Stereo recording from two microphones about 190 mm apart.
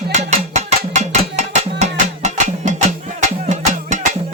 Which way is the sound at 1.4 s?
35° right (ahead or behind).